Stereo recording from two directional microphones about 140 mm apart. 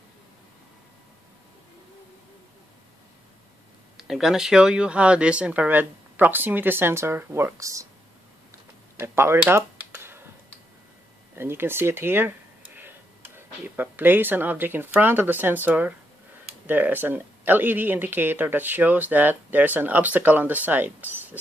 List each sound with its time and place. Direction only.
3.9 s speech: centre (ahead or behind); by 7.8 s 20° right (ahead or behind)
8.9 s a sound: 20° right (ahead or behind)
11.3 s speech: 15° right (ahead or behind)